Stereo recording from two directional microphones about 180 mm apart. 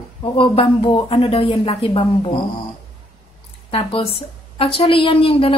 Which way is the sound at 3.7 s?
30° left (ahead or behind).